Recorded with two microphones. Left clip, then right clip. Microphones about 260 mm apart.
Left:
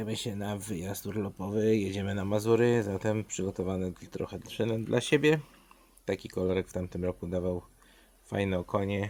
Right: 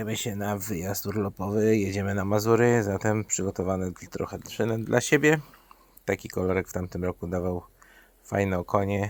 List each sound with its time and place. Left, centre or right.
0.0 s speech: centre